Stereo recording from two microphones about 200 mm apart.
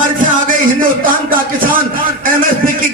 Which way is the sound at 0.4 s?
45° right (ahead or behind).